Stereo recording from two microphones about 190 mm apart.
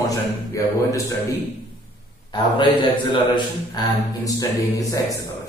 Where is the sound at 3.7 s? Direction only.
20° left (ahead or behind).